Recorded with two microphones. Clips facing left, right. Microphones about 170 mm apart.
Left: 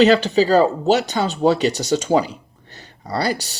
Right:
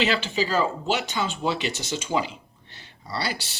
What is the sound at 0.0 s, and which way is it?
Speech, 40° left (ahead or behind).